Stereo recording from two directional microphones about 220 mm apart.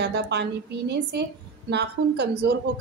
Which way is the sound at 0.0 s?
50° right (ahead or behind).